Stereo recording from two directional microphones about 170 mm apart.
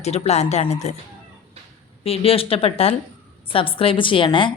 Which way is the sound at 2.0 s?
35° left (ahead or behind).